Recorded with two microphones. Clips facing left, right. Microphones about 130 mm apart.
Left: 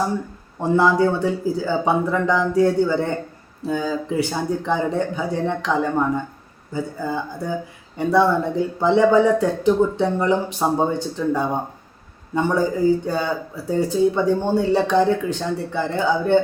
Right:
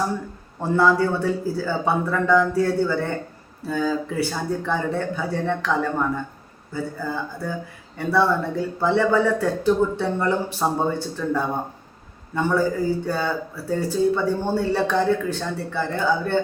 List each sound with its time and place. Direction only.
0.6 s speech: 15° left (ahead or behind)